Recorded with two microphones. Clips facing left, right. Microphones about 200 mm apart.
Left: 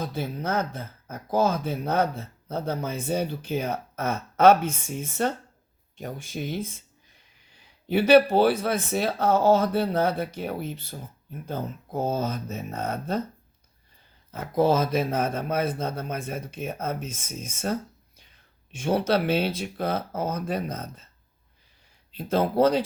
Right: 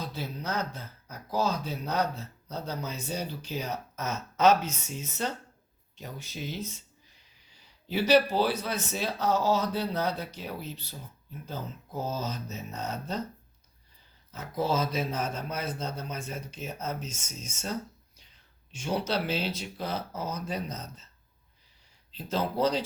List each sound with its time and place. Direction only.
0.0 s speech: 50° left (ahead or behind)
14.3 s speech: 55° left (ahead or behind)
22.1 s speech: 55° left (ahead or behind)